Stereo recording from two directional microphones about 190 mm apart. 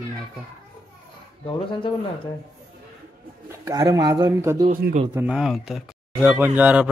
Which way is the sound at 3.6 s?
20° right (ahead or behind).